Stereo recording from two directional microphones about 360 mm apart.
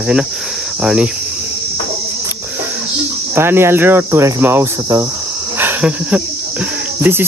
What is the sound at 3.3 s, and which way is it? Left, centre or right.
Cricket, centre.